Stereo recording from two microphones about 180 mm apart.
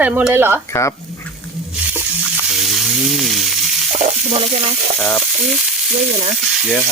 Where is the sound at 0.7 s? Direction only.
15° left (ahead or behind).